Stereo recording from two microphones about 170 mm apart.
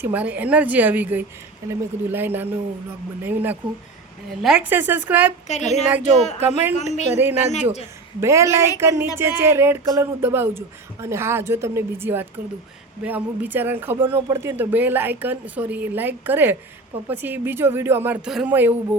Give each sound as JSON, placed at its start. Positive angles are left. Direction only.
{"t": 0.0, "sound": "speech", "side_deg": -10}
{"t": 5.5, "sound": "speech", "side_deg": 40}
{"t": 8.2, "sound": "speech", "side_deg": -15}